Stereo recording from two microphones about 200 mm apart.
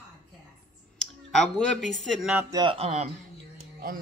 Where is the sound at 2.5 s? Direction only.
20° right (ahead or behind).